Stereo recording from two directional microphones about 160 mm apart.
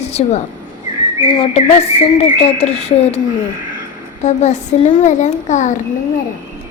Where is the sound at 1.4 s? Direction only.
40° left (ahead or behind).